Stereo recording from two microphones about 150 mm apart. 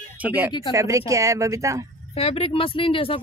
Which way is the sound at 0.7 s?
20° right (ahead or behind).